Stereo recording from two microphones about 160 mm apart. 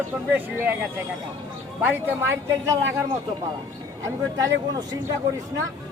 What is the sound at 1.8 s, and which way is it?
Speech, 10° right (ahead or behind).